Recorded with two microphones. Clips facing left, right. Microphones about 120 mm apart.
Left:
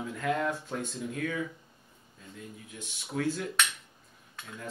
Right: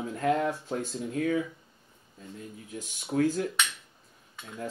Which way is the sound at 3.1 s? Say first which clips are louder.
Right 5 dB; 40° right (ahead or behind).